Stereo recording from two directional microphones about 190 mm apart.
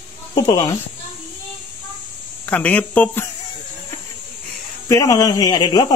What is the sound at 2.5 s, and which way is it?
Speech, 5° left (ahead or behind).